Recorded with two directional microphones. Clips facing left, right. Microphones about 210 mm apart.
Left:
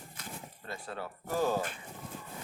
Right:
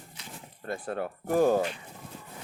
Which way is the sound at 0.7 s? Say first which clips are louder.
Right 8 dB; 55° right (ahead or behind).